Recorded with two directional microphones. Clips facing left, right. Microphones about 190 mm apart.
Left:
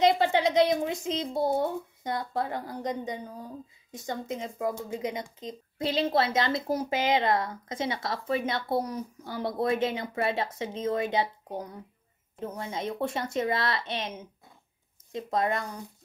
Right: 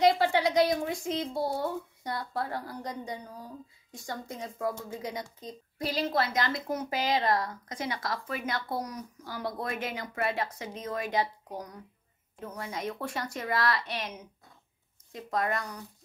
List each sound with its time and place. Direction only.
0.0 s speech: 20° left (ahead or behind)